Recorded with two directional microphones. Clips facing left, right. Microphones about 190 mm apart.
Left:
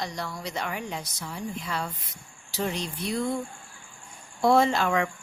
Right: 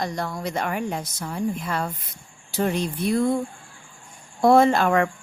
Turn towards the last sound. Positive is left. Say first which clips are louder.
# right 5 dB
turn(degrees=-50)  # may be behind; listen again after turning